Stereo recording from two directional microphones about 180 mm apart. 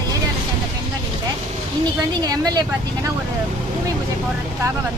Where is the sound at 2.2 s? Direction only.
20° right (ahead or behind).